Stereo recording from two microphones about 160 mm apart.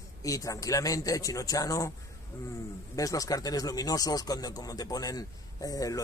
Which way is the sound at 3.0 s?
20° left (ahead or behind).